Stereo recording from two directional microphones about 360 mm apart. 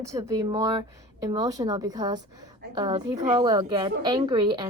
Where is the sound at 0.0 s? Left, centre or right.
Centre.